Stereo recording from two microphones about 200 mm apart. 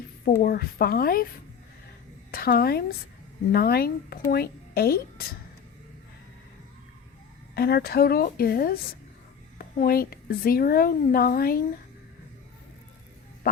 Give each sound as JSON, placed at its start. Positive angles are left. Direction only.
{"t": 0.3, "sound": "a woman's voice", "side_deg": 50}
{"t": 2.3, "sound": "a woman's voice", "side_deg": 50}
{"t": 7.5, "sound": "a woman's voice", "side_deg": 50}